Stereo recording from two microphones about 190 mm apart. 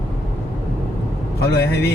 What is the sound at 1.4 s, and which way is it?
Speech, 60° left (ahead or behind).